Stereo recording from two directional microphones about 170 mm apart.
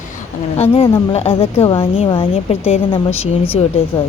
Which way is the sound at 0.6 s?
30° left (ahead or behind).